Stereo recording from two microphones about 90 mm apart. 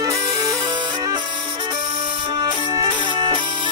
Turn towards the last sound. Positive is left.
turn(degrees=-55)  # may be behind; listen again after turning